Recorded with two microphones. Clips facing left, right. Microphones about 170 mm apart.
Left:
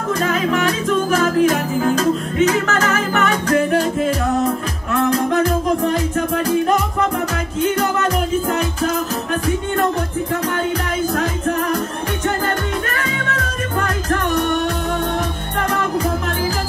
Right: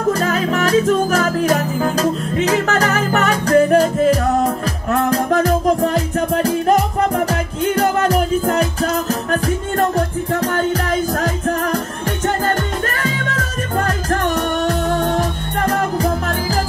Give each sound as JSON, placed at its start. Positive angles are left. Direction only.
{"t": 0.2, "sound": "music", "side_deg": -40}